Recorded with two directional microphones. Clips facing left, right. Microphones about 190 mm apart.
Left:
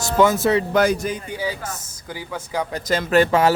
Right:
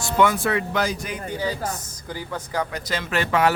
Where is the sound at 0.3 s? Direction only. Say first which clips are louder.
Left 6 dB; 40° left (ahead or behind).